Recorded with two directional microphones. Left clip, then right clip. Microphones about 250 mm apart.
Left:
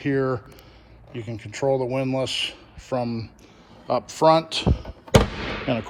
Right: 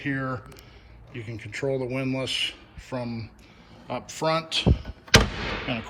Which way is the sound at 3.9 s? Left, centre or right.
Left.